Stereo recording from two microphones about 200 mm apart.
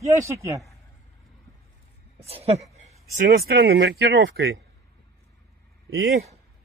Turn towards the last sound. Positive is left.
turn(degrees=-50)  # may be behind; listen again after turning